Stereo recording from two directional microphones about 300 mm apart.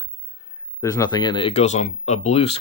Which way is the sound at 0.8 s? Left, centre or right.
Centre.